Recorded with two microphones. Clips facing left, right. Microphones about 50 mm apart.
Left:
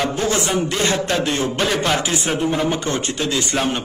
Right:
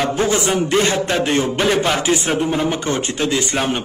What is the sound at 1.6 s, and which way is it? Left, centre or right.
Speech, centre.